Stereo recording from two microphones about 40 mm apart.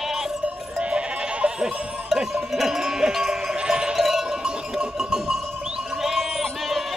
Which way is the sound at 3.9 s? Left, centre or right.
Centre.